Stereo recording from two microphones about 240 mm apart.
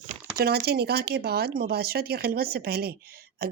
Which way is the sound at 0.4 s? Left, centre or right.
Right.